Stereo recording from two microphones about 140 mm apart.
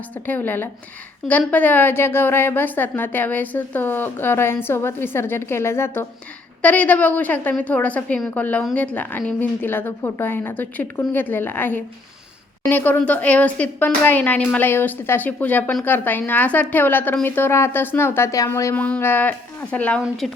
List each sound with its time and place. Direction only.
0.3 s a woman's voice: 15° left (ahead or behind)